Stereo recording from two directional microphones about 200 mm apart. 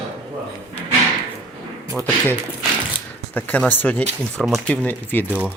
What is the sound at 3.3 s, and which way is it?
Speech, 10° left (ahead or behind).